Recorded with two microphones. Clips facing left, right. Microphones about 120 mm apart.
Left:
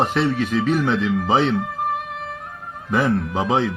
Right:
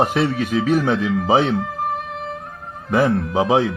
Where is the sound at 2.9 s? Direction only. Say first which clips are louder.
Right 2 dB; centre (ahead or behind).